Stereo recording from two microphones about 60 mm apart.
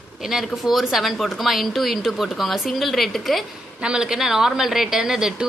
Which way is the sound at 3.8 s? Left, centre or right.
Centre.